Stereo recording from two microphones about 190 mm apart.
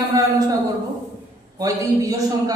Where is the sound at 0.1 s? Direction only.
20° right (ahead or behind).